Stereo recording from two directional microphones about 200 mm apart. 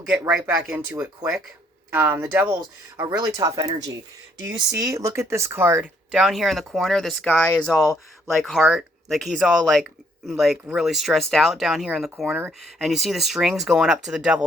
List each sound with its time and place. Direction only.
0.4 s speech: 10° right (ahead or behind)